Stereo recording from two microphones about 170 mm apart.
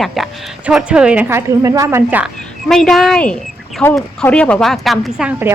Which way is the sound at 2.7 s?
Centre (ahead or behind).